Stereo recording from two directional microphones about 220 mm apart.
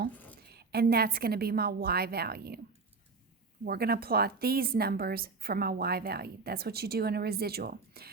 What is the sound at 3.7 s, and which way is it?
A woman's voice, 45° right (ahead or behind).